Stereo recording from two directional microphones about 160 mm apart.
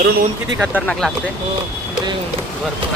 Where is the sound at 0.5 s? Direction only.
10° right (ahead or behind).